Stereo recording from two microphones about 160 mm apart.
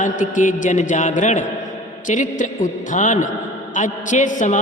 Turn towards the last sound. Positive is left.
turn(degrees=50)  # may be behind; listen again after turning